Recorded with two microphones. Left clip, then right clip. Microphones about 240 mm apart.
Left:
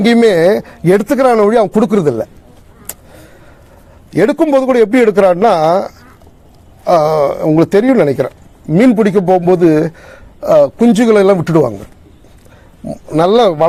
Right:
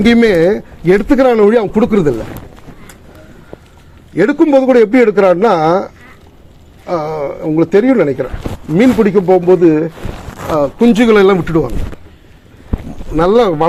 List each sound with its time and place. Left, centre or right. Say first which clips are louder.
0.0 s speech: left 1 dB; left
4.1 s a man's voice: right 1 dB; left
8.7 s a man's voice: even; left
10.5 s speech: left 3 dB; left
13.1 s speech: left 1 dB; left